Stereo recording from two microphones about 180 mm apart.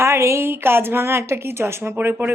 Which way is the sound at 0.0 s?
15° right (ahead or behind).